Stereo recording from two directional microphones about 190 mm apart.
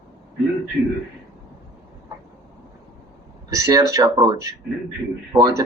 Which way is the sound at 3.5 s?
20° right (ahead or behind).